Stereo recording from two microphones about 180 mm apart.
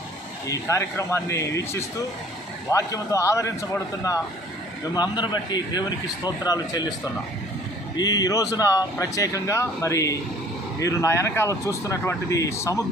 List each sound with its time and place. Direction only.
0.4 s speech: 15° left (ahead or behind)
7.9 s speech: 20° left (ahead or behind)